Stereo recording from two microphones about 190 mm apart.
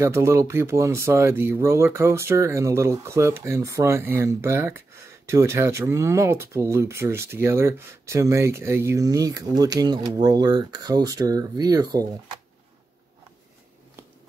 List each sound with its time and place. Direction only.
0.0 s speech: 15° right (ahead or behind)